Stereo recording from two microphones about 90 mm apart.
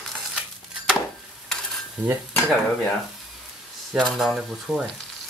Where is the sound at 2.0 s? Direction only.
25° right (ahead or behind).